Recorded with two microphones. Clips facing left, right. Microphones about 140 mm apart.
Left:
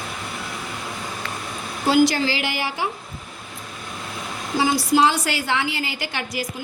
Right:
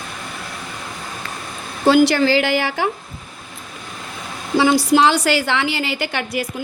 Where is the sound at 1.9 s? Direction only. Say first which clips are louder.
Right 5 dB; 65° right (ahead or behind).